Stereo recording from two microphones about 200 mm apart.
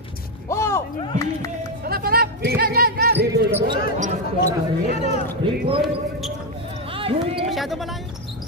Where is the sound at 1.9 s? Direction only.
50° right (ahead or behind).